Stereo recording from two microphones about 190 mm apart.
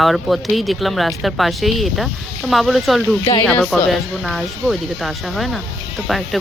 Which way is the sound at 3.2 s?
20° left (ahead or behind).